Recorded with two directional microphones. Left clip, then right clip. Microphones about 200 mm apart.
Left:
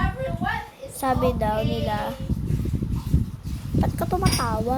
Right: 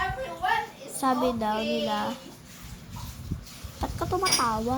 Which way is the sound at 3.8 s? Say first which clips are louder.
Left 1 dB; 20° left (ahead or behind).